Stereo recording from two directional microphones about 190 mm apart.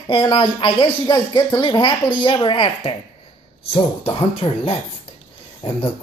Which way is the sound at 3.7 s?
30° left (ahead or behind).